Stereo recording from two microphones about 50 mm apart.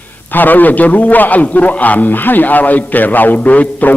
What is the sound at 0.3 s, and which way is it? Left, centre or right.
A man's voice, left.